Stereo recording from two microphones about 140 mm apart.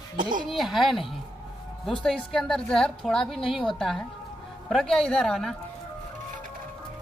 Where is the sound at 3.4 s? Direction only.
40° left (ahead or behind).